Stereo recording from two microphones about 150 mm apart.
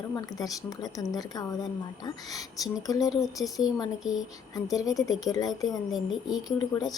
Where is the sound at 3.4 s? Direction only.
5° right (ahead or behind).